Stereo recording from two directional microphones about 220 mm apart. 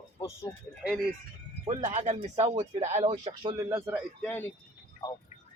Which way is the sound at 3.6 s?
15° right (ahead or behind).